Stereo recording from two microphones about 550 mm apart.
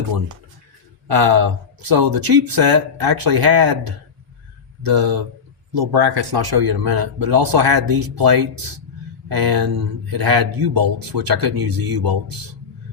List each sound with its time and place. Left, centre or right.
1.0 s speech: right